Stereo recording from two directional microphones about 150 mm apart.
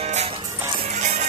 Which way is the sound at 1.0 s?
50° right (ahead or behind).